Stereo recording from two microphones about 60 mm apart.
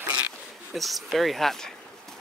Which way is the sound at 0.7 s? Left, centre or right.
Centre.